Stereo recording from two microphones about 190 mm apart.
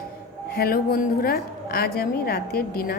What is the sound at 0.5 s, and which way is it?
A woman's voice, 55° left (ahead or behind).